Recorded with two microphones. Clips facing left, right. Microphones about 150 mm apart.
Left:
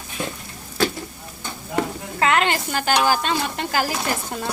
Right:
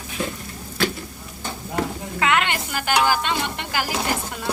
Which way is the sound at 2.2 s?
35° left (ahead or behind).